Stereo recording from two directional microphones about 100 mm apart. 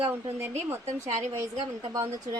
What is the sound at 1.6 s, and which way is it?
Speech, 50° right (ahead or behind).